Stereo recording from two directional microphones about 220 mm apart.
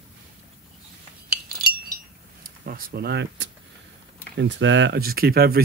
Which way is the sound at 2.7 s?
40° right (ahead or behind).